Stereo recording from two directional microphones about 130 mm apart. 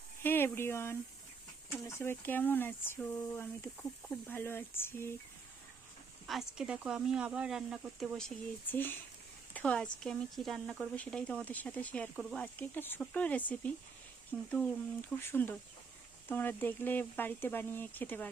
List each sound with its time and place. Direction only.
0.2 s speech: 15° left (ahead or behind)
6.2 s speech: centre (ahead or behind)
8.7 s speech: 15° left (ahead or behind)